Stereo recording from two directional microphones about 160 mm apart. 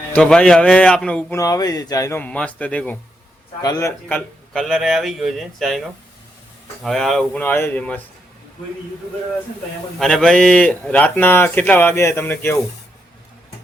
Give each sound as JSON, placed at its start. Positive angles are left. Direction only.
{"t": 0.1, "sound": "a man's voice", "side_deg": 5}
{"t": 1.4, "sound": "speech", "side_deg": 25}
{"t": 3.6, "sound": "speech", "side_deg": 20}
{"t": 4.5, "sound": "a man's voice", "side_deg": 0}
{"t": 6.8, "sound": "speech", "side_deg": 0}
{"t": 10.0, "sound": "speech", "side_deg": 5}